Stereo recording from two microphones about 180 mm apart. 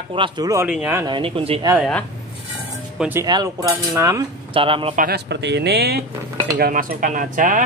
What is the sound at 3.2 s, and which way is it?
Cutlery, 20° right (ahead or behind).